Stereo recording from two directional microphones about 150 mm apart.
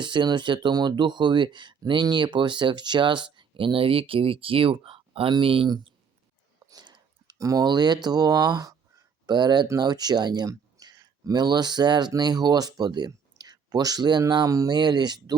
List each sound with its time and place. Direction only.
0.0 s speech: 30° right (ahead or behind)
6.7 s a sound: 30° right (ahead or behind)
8.0 s speech: 25° right (ahead or behind)